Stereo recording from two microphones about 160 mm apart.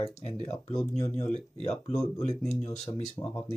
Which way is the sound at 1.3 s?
40° left (ahead or behind).